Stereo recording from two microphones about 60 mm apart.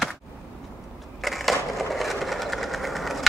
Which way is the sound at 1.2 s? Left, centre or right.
Centre.